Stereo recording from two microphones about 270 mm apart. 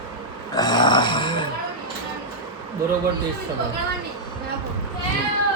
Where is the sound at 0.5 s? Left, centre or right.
Centre.